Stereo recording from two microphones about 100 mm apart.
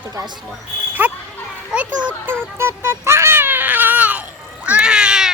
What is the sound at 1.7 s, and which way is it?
Children playing, 15° right (ahead or behind).